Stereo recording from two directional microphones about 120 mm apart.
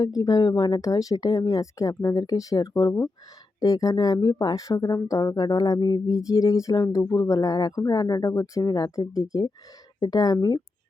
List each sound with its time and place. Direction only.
0.0 s speech: 30° left (ahead or behind)